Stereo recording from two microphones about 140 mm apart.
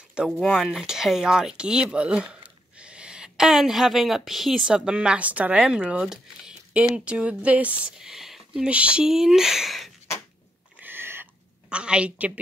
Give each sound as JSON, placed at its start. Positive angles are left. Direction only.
{"t": 0.1, "sound": "speech", "side_deg": -5}
{"t": 10.8, "sound": "a sound", "side_deg": -15}
{"t": 11.7, "sound": "a woman's voice", "side_deg": -5}